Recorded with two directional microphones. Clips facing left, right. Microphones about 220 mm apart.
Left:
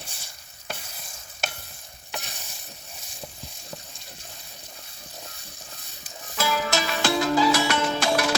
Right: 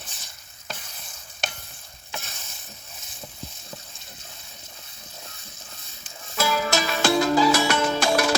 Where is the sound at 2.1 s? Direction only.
15° left (ahead or behind).